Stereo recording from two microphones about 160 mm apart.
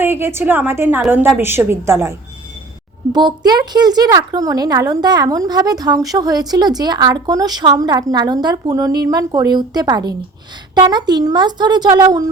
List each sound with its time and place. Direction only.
0.0 s a woman's voice: 15° right (ahead or behind)
3.1 s speech: 25° right (ahead or behind)